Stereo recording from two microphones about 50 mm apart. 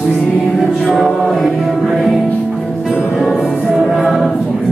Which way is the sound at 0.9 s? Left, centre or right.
Centre.